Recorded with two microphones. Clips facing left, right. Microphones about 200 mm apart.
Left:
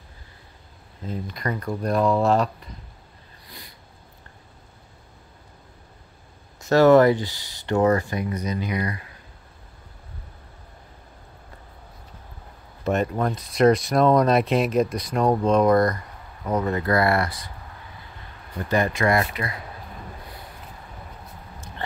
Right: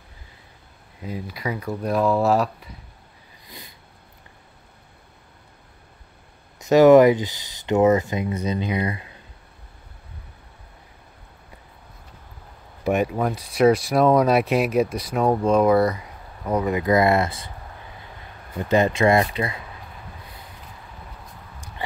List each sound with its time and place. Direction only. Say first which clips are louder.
1.0 s speech: even; 5° right (ahead or behind)
3.4 s a sound: right 2 dB; 20° right (ahead or behind)
6.6 s speech: right 3 dB; 15° right (ahead or behind)
12.8 s speech: right 2 dB; 10° right (ahead or behind)
18.6 s speech: right 4 dB; 20° right (ahead or behind)